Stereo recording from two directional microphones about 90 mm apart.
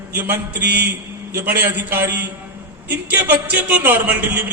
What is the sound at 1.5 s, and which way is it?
A man's voice, 20° right (ahead or behind).